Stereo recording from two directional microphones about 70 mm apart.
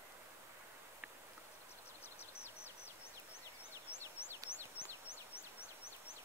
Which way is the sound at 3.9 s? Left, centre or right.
Left.